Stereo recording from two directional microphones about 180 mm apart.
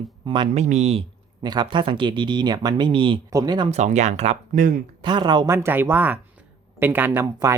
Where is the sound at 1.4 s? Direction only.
25° right (ahead or behind).